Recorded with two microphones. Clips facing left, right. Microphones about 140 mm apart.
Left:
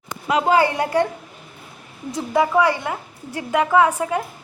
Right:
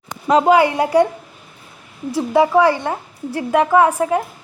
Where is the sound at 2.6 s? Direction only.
35° right (ahead or behind).